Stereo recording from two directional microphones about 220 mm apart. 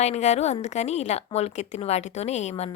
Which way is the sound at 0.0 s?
30° left (ahead or behind).